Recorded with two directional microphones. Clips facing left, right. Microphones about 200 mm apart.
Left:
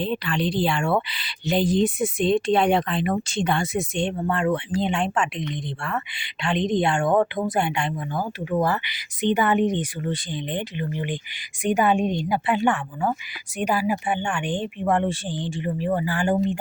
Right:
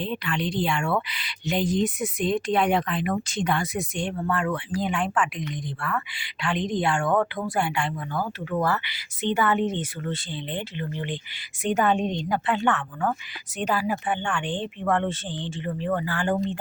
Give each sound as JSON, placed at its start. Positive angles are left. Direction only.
{"t": 0.0, "sound": "speech", "side_deg": 35}